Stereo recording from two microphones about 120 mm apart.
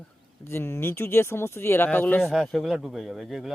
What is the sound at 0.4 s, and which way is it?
Speech, 20° left (ahead or behind).